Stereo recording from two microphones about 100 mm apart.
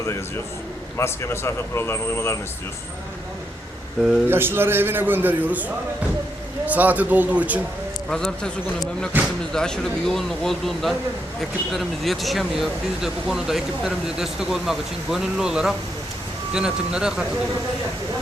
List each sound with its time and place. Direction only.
0.9 s speech: 25° left (ahead or behind)
4.3 s a man's voice: 20° right (ahead or behind)
8.1 s a man's voice: 5° left (ahead or behind)
9.1 s a man's voice: 20° right (ahead or behind)
9.5 s a man's voice: 5° left (ahead or behind)